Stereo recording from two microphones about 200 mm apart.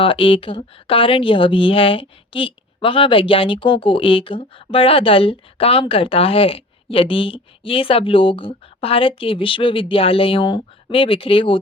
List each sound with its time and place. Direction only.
0.0 s speech: 25° left (ahead or behind)